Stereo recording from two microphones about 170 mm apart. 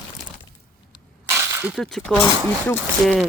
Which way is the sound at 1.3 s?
15° right (ahead or behind).